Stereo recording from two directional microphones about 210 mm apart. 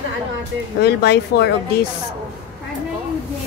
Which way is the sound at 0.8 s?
50° left (ahead or behind).